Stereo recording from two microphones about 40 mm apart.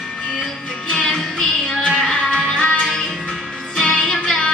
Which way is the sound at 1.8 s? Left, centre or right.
Left.